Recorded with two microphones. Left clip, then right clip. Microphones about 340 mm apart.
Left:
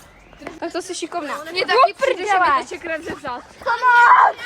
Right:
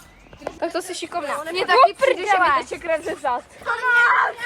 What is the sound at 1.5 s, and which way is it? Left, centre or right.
Speech, centre.